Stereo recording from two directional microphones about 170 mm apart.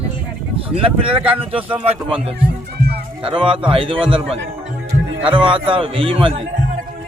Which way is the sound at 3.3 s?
30° right (ahead or behind).